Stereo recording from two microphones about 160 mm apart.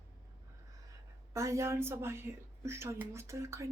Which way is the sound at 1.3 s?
20° right (ahead or behind).